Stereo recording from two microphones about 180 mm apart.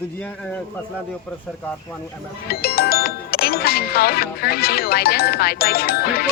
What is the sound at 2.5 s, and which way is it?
Speech, 60° left (ahead or behind).